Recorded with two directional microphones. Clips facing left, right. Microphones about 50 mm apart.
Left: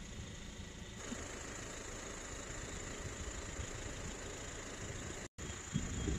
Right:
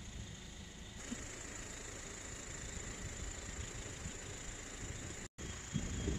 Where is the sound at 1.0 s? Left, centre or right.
Left.